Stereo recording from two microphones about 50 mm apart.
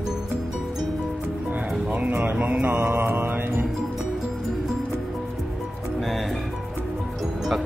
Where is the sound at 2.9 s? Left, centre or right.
Right.